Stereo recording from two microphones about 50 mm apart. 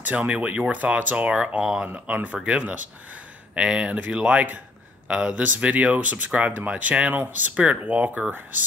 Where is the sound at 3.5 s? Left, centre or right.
Right.